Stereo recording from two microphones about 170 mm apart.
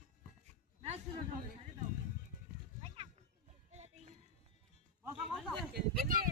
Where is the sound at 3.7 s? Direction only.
40° right (ahead or behind).